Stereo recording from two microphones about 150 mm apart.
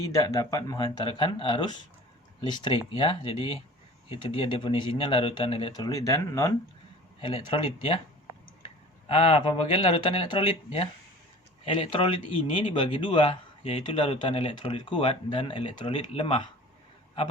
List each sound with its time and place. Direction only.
0.0 s speech: 25° left (ahead or behind)
5.7 s speech: 25° left (ahead or behind)
7.2 s speech: 35° left (ahead or behind)